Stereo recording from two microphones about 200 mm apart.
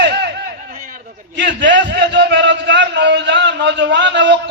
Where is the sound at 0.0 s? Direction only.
60° right (ahead or behind).